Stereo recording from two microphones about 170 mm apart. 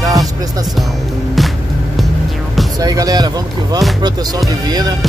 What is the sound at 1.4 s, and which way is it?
Music, centre (ahead or behind).